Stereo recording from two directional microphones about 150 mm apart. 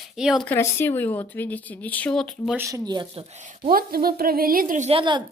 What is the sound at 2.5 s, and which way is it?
Speech, 15° right (ahead or behind).